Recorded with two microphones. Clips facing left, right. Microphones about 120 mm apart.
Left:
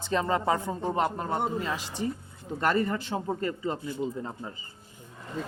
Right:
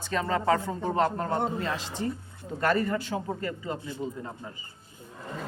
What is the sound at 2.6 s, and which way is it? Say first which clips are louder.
A man's voice: even; 25° left (ahead or behind).